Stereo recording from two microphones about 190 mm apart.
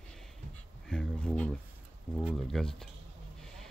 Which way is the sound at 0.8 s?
5° left (ahead or behind).